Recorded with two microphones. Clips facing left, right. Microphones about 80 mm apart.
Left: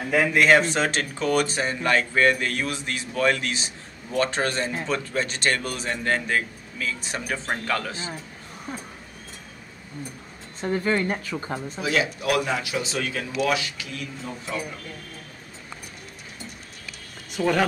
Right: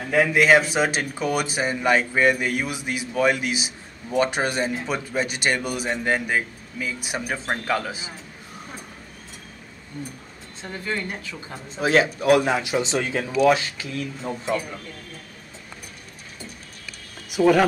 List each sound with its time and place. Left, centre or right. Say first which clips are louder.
0.1 s speech: right 1 dB; centre
10.8 s speech: left 3 dB; left
11.8 s speech: right 6 dB; right
17.3 s speech: right 5 dB; centre